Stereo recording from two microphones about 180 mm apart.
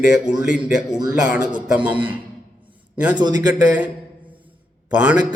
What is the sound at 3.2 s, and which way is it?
Speech, 20° right (ahead or behind).